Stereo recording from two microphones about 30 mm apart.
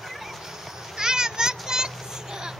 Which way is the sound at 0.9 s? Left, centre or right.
Right.